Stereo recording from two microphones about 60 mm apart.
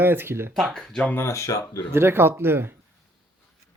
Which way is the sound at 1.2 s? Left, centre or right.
Left.